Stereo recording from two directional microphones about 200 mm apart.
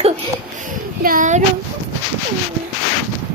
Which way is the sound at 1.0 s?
40° right (ahead or behind).